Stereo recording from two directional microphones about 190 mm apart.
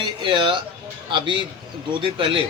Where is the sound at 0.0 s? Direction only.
25° right (ahead or behind).